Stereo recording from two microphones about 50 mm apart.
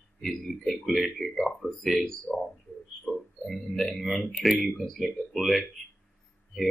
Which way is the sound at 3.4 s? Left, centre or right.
Centre.